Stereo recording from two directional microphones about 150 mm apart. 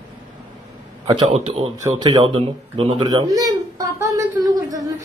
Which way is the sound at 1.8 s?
25° right (ahead or behind).